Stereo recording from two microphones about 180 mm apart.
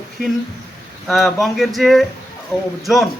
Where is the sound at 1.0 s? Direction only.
Centre (ahead or behind).